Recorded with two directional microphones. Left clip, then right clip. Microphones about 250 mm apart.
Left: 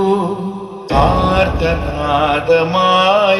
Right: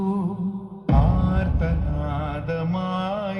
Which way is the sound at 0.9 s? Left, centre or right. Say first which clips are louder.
Left 13 dB; right.